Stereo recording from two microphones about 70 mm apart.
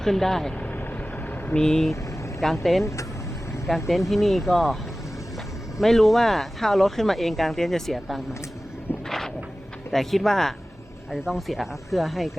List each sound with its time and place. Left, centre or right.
0.0 s speech: centre
0.6 s vehicle: left
1.5 s speech: centre
2.8 s speech: left
3.8 s speech: centre
5.8 s speech: centre
9.0 s vehicle: centre
9.9 s speech: centre